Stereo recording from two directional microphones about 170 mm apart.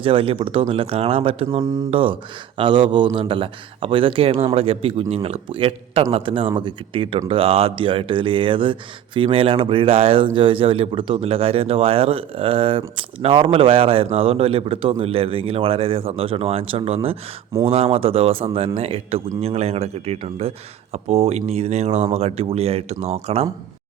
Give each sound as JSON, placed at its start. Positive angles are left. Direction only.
{"t": 0.0, "sound": "speech", "side_deg": -35}